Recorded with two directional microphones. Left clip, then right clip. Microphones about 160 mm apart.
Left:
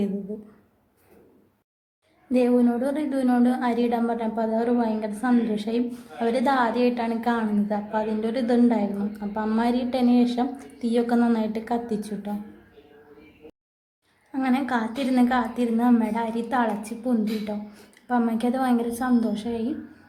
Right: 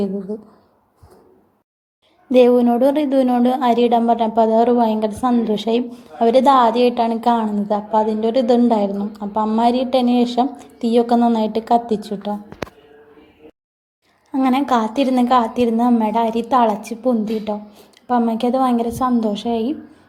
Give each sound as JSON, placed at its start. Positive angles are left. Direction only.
{"t": 2.3, "sound": "a woman's voice", "side_deg": -35}
{"t": 14.4, "sound": "a woman's voice", "side_deg": -30}